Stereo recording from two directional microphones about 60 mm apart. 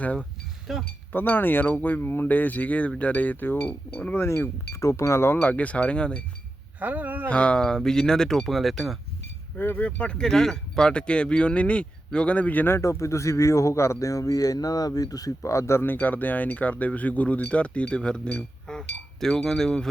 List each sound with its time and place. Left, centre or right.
0.0 s speech: left
0.7 s speech: centre
1.1 s speech: left
4.4 s speech: left
5.4 s speech: left
6.7 s speech: right
7.3 s speech: centre
9.6 s speech: left
10.2 s speech: centre; by 12.7 s left
12.7 s speech: left
15.9 s speech: left; by 19.9 s centre